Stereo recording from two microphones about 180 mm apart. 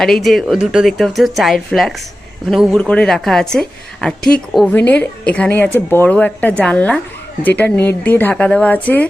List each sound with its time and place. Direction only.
0.0 s a woman's voice: centre (ahead or behind)